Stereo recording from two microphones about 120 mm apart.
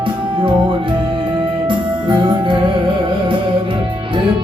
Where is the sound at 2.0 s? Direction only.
45° right (ahead or behind).